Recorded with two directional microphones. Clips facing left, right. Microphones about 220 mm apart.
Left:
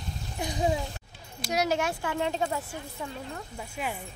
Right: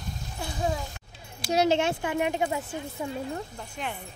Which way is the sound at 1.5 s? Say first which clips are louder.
Right 4 dB; 25° right (ahead or behind).